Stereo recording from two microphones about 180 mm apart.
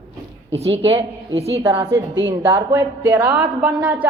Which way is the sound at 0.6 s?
35° right (ahead or behind).